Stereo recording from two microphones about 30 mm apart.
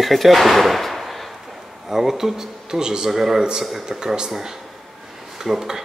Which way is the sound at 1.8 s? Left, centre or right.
Centre.